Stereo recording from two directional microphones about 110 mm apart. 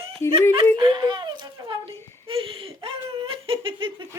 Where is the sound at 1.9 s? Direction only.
25° left (ahead or behind).